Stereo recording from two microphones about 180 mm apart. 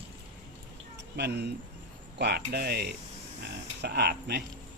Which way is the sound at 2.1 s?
65° right (ahead or behind).